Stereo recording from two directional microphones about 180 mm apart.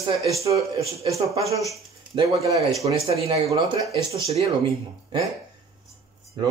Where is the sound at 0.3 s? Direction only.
15° right (ahead or behind).